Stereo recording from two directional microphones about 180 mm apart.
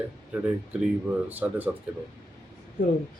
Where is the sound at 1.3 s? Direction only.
10° right (ahead or behind).